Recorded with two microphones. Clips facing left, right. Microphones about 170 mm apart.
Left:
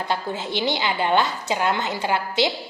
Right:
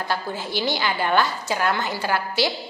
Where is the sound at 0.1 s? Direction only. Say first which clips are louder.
Left 2 dB; 20° left (ahead or behind).